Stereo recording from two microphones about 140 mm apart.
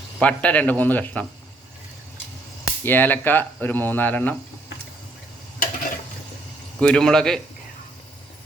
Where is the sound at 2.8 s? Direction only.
15° left (ahead or behind).